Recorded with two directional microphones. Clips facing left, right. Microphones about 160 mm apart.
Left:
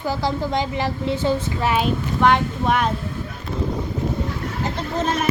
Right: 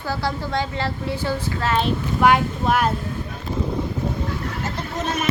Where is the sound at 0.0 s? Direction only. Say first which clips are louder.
Left 3 dB; 15° left (ahead or behind).